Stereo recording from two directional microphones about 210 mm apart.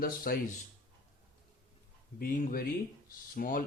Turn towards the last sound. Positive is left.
turn(degrees=40)  # may be behind; listen again after turning